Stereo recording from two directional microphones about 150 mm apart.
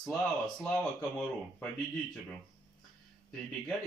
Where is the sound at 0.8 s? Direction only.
5° left (ahead or behind).